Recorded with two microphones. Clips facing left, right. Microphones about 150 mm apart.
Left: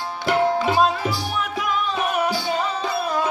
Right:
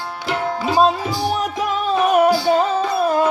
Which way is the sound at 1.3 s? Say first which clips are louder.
Right 4 dB; 40° right (ahead or behind).